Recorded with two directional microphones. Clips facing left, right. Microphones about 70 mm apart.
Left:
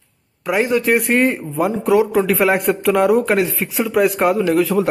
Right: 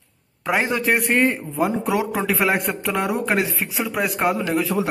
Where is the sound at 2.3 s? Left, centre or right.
Centre.